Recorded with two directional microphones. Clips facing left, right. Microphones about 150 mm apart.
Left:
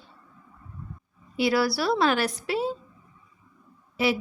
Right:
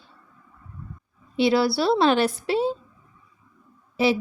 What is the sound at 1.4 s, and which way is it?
A woman's voice, 25° right (ahead or behind).